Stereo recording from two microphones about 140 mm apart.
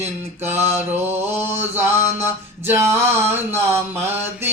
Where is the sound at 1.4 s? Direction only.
15° right (ahead or behind).